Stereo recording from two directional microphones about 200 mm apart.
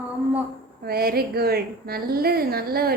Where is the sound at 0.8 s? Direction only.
50° right (ahead or behind).